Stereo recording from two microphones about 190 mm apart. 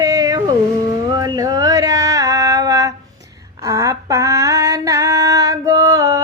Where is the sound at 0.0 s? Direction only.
20° right (ahead or behind).